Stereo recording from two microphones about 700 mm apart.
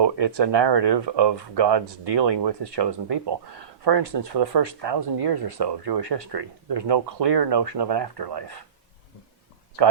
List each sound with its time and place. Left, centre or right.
0.0 s speech: right